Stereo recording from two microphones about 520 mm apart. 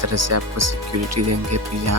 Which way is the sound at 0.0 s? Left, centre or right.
Right.